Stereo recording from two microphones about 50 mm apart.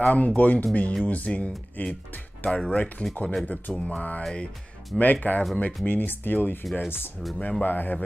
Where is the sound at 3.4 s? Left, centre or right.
Left.